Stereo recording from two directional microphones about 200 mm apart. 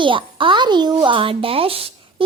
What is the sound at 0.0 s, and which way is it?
Speech, 25° right (ahead or behind).